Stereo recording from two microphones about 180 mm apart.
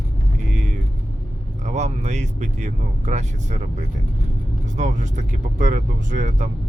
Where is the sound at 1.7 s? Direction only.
40° right (ahead or behind).